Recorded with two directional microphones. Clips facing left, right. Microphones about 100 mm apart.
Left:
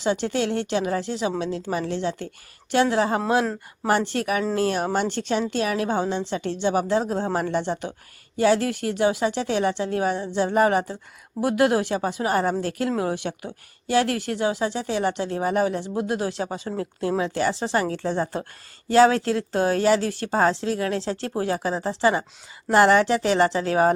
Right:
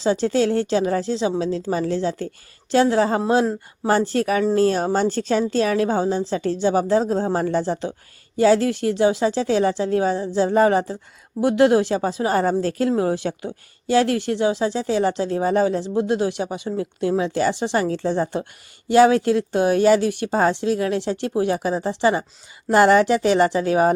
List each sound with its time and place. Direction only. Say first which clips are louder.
0.0 s speech: right 5 dB; 35° right (ahead or behind)
16.6 s a woman's voice: right 5 dB; 35° left (ahead or behind)
17.2 s speech: right 3 dB; 25° right (ahead or behind)
23.0 s speech: right 3 dB; 25° left (ahead or behind)
23.6 s speech: right 2 dB; 20° right (ahead or behind)